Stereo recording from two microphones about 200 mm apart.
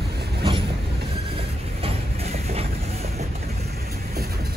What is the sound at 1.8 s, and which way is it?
Train, 30° right (ahead or behind).